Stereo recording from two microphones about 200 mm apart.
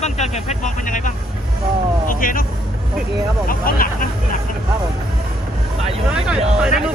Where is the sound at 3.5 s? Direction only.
45° left (ahead or behind).